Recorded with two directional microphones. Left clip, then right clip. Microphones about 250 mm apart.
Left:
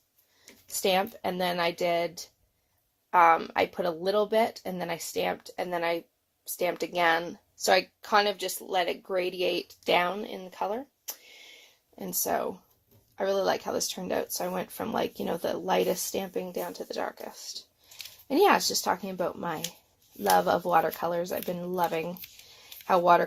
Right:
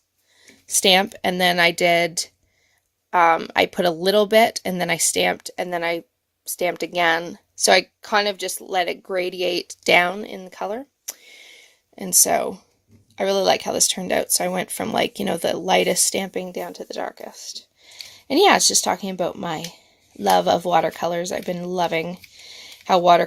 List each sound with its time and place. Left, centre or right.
0.8 s speech: right